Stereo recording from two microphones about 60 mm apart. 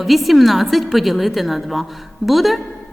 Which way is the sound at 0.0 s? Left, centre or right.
Centre.